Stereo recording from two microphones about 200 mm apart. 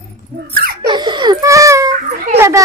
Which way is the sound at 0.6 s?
50° right (ahead or behind).